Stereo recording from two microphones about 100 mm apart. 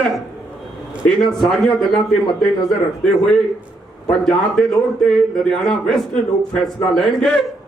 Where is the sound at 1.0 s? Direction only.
5° left (ahead or behind).